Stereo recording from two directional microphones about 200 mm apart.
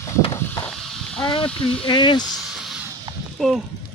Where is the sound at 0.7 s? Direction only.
Centre (ahead or behind).